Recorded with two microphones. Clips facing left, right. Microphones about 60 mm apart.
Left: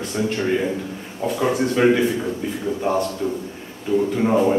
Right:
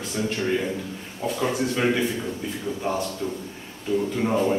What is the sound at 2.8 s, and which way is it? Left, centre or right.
A man's voice, centre.